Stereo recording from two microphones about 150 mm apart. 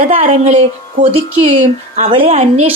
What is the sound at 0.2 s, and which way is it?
A woman's voice, 55° right (ahead or behind).